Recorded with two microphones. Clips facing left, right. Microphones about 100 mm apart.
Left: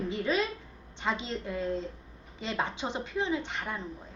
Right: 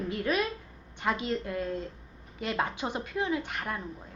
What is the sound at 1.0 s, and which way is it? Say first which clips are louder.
Speech: right 2 dB; 10° left (ahead or behind).